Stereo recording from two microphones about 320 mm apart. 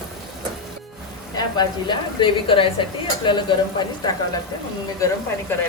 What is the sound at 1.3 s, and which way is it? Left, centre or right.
A woman's voice, centre.